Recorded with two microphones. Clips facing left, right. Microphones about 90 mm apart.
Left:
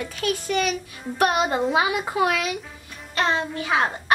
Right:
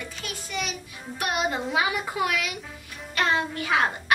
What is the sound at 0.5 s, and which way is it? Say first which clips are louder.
A child's voice: left 9 dB; 50° left (ahead or behind).